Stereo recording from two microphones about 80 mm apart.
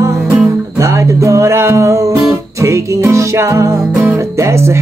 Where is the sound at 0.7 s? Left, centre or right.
Right.